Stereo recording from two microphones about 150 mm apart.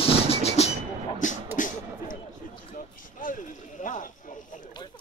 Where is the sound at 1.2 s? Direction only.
55° left (ahead or behind).